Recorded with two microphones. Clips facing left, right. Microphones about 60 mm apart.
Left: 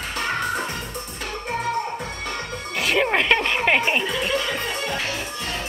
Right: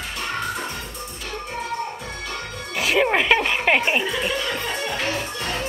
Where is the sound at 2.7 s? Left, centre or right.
Centre.